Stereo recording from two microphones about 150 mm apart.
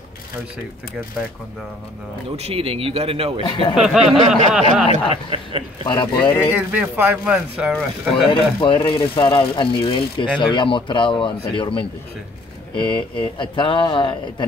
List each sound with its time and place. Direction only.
2.3 s a man's voice: 40° right (ahead or behind)
3.7 s speech: 5° right (ahead or behind)
5.1 s a man's voice: 35° right (ahead or behind)
5.9 s speech: 30° left (ahead or behind)
6.5 s speech: 10° right (ahead or behind)
8.3 s speech: 35° left (ahead or behind)